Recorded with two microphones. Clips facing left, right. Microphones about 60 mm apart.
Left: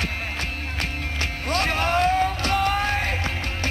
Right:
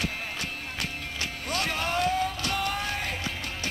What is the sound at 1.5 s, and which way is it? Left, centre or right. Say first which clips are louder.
Music: left 7 dB; left.